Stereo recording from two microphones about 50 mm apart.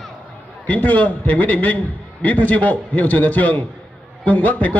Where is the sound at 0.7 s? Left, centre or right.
Left.